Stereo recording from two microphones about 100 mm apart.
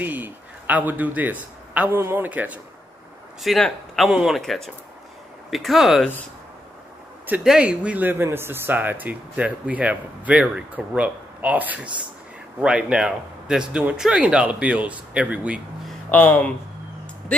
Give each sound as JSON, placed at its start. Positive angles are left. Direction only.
{"t": 0.0, "sound": "a man's voice", "side_deg": -15}
{"t": 3.6, "sound": "speech", "side_deg": 0}
{"t": 7.4, "sound": "speech", "side_deg": -10}
{"t": 16.1, "sound": "speech", "side_deg": 15}